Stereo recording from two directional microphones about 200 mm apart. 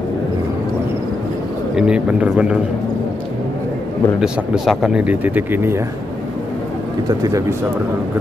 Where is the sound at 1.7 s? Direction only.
5° right (ahead or behind).